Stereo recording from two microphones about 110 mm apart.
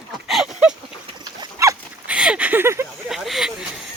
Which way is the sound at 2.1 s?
10° right (ahead or behind).